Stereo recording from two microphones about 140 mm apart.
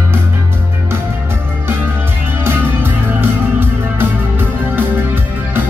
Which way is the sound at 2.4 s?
15° right (ahead or behind).